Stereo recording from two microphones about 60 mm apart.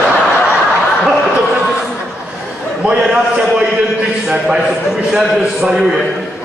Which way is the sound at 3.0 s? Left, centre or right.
Centre.